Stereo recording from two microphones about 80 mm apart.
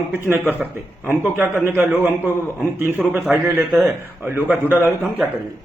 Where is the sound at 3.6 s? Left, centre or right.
Centre.